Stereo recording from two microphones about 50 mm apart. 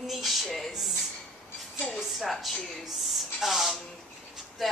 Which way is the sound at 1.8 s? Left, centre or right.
Centre.